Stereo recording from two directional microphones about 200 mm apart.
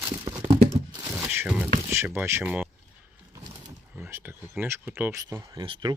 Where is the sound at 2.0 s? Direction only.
10° right (ahead or behind).